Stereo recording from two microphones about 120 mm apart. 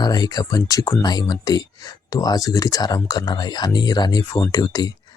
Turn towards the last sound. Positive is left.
turn(degrees=35)  # may be behind; listen again after turning